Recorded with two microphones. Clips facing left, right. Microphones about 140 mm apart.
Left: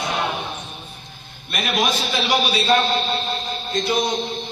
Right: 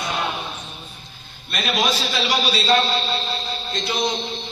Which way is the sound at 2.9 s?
50° left (ahead or behind).